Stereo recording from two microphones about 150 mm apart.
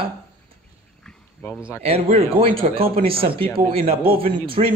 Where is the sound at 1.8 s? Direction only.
40° right (ahead or behind).